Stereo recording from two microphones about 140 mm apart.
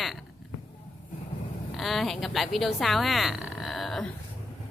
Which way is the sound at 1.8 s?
Centre (ahead or behind).